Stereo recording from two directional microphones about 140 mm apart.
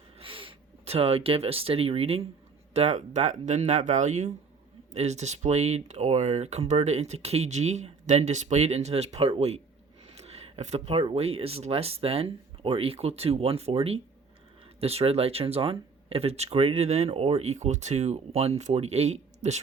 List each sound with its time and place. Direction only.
0.2 s speech: 40° right (ahead or behind)